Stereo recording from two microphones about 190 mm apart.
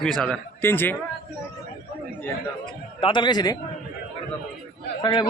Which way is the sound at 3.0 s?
25° left (ahead or behind).